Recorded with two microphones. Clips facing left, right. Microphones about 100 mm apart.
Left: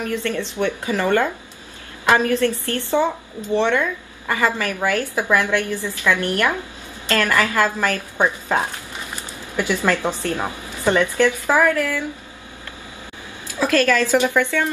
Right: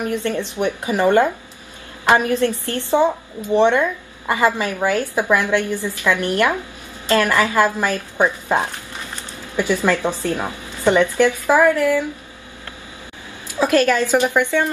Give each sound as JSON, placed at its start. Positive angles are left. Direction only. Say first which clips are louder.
{"t": 0.0, "sound": "a woman's voice", "louder": "right 2 dB", "side_deg": -20}
{"t": 9.8, "sound": "speech", "louder": "right 2 dB", "side_deg": -20}
{"t": 13.5, "sound": "a woman's voice", "louder": "right 2 dB", "side_deg": -20}